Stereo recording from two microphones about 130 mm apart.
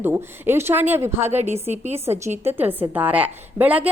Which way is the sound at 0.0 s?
15° right (ahead or behind).